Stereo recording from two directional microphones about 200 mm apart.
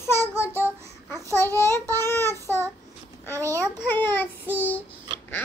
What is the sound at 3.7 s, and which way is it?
Speech, 10° left (ahead or behind).